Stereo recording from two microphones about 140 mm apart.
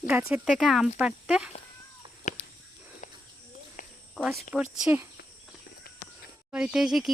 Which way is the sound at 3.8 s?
65° left (ahead or behind).